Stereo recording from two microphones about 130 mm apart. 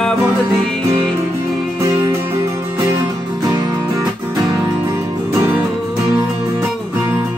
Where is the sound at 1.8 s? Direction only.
25° right (ahead or behind).